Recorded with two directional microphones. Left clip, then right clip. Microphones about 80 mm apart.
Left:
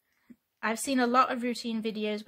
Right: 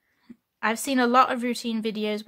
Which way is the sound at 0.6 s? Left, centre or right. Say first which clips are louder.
Right 5 dB; right.